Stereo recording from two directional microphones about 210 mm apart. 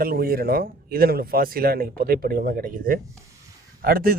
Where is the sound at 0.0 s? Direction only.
45° right (ahead or behind).